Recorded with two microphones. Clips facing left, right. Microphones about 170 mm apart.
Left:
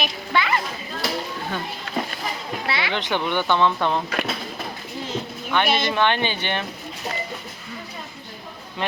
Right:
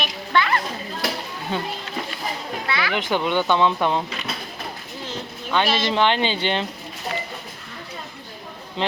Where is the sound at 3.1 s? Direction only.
15° right (ahead or behind).